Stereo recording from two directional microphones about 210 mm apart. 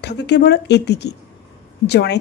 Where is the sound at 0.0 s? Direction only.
55° left (ahead or behind).